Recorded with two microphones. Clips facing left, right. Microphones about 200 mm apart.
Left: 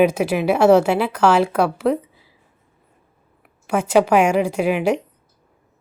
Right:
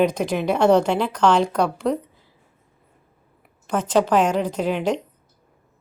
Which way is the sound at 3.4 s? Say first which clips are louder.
Left 3 dB; 5° left (ahead or behind).